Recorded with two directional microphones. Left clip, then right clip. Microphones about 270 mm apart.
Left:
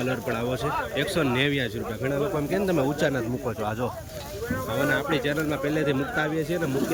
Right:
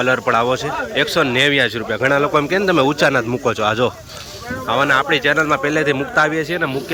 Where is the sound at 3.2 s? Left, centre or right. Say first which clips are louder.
Right 11 dB; right.